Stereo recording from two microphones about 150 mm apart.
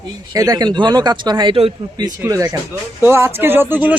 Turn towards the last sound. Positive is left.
turn(degrees=-10)  # may be behind; listen again after turning